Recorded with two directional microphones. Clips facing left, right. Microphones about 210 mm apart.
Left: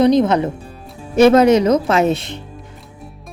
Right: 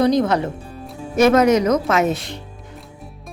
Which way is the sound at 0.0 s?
20° left (ahead or behind).